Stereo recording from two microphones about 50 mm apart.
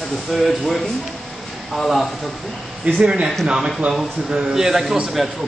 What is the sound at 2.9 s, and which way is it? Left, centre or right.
Speech, right.